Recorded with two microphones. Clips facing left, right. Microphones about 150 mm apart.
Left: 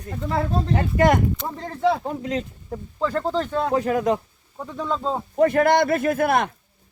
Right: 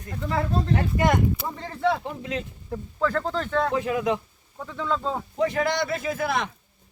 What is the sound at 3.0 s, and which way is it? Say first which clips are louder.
Speech: left 2 dB; 10° left (ahead or behind).